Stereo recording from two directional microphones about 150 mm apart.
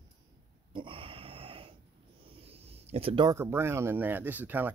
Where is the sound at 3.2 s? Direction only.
20° right (ahead or behind).